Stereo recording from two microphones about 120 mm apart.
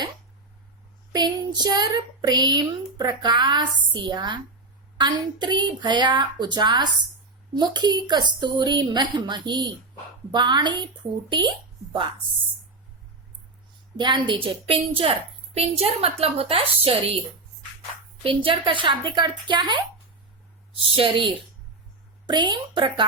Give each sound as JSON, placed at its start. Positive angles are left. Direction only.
{"t": 1.1, "sound": "a woman's voice", "side_deg": -35}
{"t": 13.9, "sound": "a woman's voice", "side_deg": -40}
{"t": 18.2, "sound": "a woman's voice", "side_deg": -45}
{"t": 20.9, "sound": "a woman's voice", "side_deg": -45}